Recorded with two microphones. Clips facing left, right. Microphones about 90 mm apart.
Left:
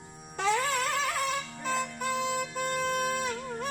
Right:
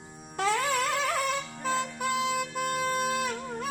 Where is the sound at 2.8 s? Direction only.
Centre (ahead or behind).